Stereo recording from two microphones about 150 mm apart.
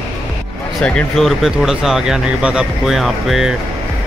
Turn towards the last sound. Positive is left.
turn(degrees=0)  # may be behind; listen again after turning